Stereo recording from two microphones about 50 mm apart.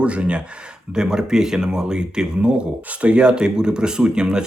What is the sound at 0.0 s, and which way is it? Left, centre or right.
Speech, right.